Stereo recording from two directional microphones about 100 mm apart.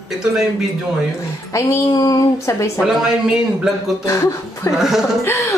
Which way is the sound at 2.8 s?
5° right (ahead or behind).